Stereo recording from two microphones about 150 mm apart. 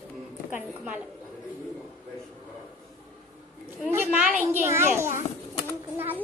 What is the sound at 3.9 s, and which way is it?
A woman's voice, 10° right (ahead or behind).